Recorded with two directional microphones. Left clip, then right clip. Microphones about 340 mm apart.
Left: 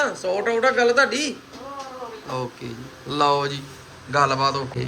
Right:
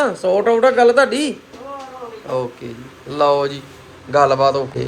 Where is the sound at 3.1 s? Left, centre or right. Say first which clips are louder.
Right 5 dB; centre.